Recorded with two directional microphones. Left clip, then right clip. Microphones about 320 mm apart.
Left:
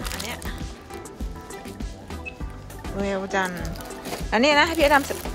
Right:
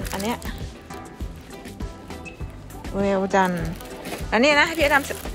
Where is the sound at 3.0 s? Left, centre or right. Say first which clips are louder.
Right 5 dB; centre.